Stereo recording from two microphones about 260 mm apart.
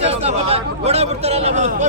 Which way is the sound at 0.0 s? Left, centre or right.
Right.